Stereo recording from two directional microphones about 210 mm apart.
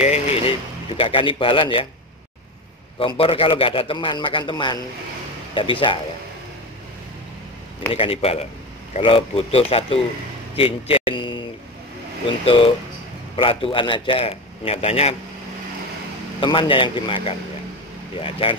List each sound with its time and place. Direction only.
0.0 s vehicle: 30° left (ahead or behind)
0.9 s a man's voice: 25° left (ahead or behind)
3.0 s a man's voice: 25° left (ahead or behind)
7.9 s a man's voice: 25° left (ahead or behind)
12.4 s a man's voice: 25° left (ahead or behind)
16.3 s a man's voice: 25° left (ahead or behind)